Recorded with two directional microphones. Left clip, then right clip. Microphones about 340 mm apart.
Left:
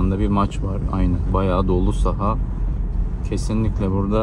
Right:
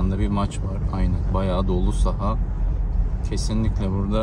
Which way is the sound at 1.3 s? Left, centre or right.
Centre.